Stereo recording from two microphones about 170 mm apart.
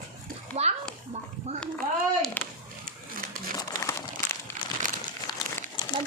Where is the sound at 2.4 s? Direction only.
10° left (ahead or behind).